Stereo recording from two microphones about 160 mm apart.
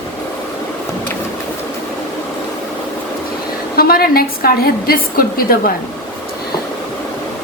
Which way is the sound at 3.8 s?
70° left (ahead or behind).